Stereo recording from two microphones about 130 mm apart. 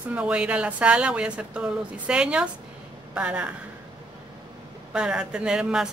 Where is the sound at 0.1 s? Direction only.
10° right (ahead or behind).